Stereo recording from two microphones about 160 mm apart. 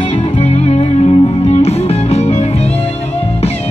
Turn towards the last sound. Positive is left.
turn(degrees=40)  # may be behind; listen again after turning